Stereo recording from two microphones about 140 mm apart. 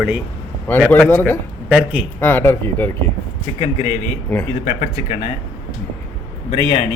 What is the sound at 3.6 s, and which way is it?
Speech, 45° left (ahead or behind).